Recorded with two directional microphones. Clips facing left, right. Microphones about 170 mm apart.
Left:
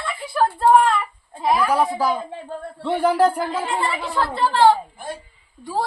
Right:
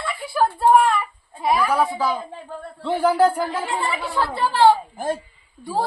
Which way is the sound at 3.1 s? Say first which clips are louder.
Even; 5° right (ahead or behind).